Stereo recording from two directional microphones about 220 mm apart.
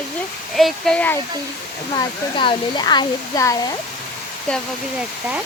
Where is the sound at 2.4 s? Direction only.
20° left (ahead or behind).